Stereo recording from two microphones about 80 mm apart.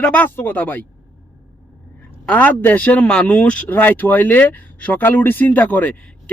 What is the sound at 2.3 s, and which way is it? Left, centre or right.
Speech, centre.